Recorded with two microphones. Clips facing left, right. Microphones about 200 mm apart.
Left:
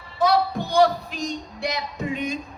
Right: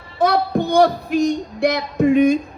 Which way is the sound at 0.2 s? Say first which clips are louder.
Right 3 dB; 55° right (ahead or behind).